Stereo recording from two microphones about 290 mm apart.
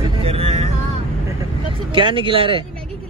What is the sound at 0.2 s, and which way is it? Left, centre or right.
Vehicle, centre.